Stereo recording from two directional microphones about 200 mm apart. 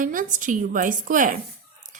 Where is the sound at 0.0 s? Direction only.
40° right (ahead or behind).